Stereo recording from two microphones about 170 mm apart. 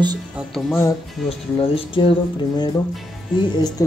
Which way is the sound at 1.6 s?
30° left (ahead or behind).